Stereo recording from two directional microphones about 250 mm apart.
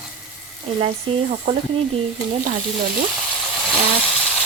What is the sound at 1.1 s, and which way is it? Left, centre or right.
Speech, right.